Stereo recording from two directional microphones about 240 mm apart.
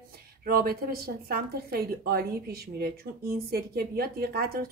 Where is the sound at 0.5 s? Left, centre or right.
Right.